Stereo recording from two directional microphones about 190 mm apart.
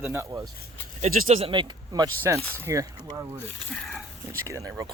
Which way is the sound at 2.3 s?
10° left (ahead or behind).